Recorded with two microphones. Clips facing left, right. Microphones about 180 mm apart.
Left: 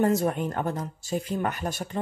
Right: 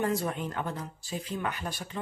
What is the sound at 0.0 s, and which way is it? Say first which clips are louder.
Speech: left 6 dB; 45° left (ahead or behind).